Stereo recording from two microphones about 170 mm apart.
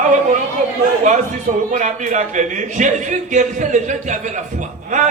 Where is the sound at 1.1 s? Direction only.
45° right (ahead or behind).